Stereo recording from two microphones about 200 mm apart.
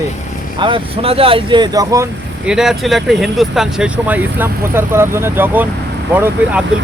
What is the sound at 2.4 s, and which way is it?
Speech, 5° right (ahead or behind).